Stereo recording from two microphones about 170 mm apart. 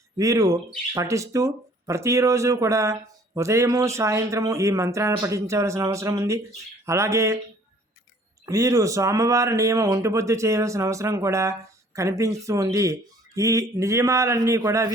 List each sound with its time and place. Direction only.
0.2 s speech: 20° right (ahead or behind)
8.4 s speech: 20° right (ahead or behind)